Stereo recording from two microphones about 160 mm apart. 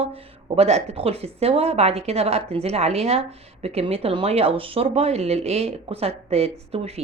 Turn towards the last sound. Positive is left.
turn(degrees=-40)  # may be behind; listen again after turning